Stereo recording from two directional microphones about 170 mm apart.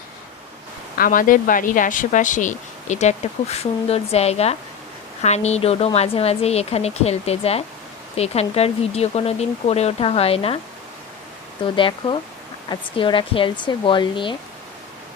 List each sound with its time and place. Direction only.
0.9 s speech: 55° left (ahead or behind); by 10.6 s 35° left (ahead or behind)
11.6 s speech: 30° left (ahead or behind)